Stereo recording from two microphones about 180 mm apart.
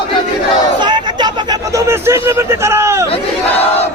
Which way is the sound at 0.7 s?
25° right (ahead or behind).